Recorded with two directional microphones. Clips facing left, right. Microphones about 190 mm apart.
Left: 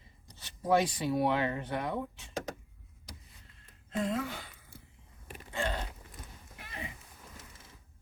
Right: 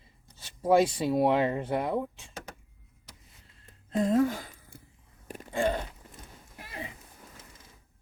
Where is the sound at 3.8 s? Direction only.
40° right (ahead or behind).